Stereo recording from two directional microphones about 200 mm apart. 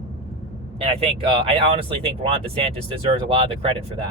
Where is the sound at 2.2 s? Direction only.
30° right (ahead or behind).